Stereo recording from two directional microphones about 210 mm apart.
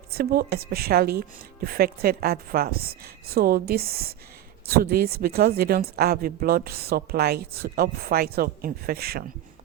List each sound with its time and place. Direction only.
0.1 s speech: 45° right (ahead or behind)